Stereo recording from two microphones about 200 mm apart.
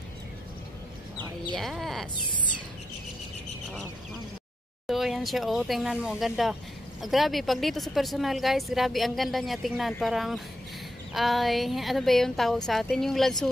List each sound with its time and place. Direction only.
1.5 s a woman's voice: centre (ahead or behind)
4.8 s a woman's voice: centre (ahead or behind)